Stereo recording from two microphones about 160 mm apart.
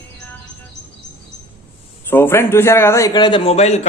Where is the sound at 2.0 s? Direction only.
15° left (ahead or behind); by 3.8 s 40° left (ahead or behind).